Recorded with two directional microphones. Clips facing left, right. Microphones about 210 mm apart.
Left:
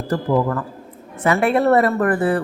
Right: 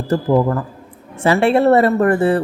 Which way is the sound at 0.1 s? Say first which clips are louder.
Right 4 dB; 25° right (ahead or behind).